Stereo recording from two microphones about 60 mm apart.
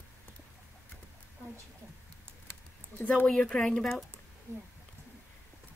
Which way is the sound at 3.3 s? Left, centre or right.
Centre.